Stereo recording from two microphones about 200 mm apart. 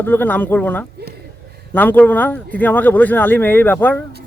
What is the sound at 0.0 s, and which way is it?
Speech, 10° left (ahead or behind).